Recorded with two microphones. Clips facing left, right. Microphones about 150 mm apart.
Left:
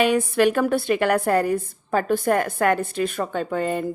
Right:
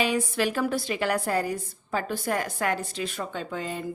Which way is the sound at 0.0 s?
60° left (ahead or behind).